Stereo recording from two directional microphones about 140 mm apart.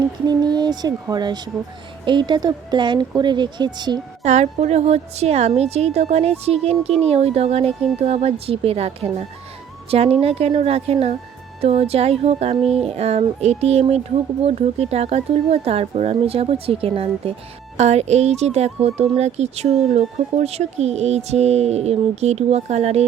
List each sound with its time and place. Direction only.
0.3 s speech: 30° right (ahead or behind)
4.2 s speech: 55° right (ahead or behind)
17.7 s speech: 55° right (ahead or behind)